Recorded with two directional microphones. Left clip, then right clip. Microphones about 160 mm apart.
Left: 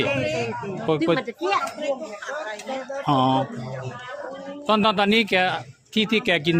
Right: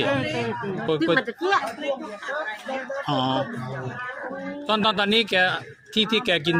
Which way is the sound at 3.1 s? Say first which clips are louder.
Left 5 dB; 50° left (ahead or behind).